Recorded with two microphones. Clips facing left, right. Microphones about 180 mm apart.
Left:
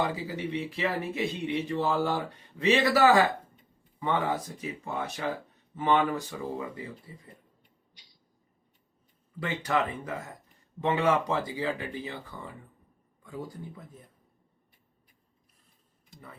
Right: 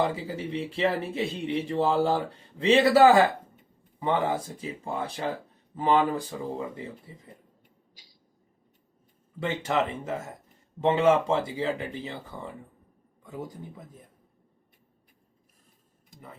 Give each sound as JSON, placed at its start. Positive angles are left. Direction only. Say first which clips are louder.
{"t": 0.0, "sound": "speech", "louder": "right 2 dB", "side_deg": -30}
{"t": 9.4, "sound": "speech", "louder": "right 2 dB", "side_deg": -25}